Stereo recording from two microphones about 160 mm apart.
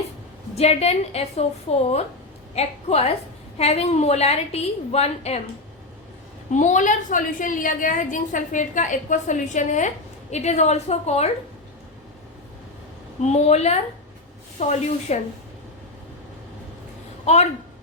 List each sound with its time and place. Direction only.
0.5 s a woman's voice: 40° left (ahead or behind)
6.5 s a woman's voice: 50° left (ahead or behind)
13.2 s a woman's voice: 45° left (ahead or behind)
17.2 s speech: 45° left (ahead or behind)